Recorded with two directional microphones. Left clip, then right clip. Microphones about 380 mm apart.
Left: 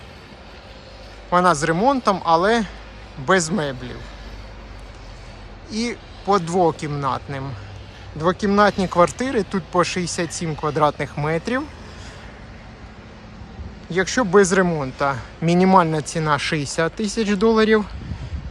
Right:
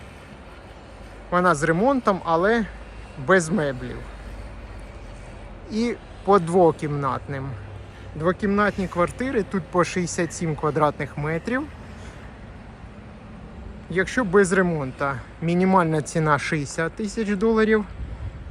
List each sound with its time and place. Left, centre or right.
1.3 s speech: centre
5.6 s speech: centre
13.9 s a man's voice: centre